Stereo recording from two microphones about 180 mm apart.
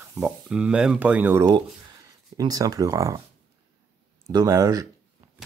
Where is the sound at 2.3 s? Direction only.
20° right (ahead or behind).